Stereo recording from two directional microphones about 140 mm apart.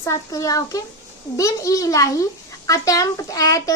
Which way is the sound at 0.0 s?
20° left (ahead or behind).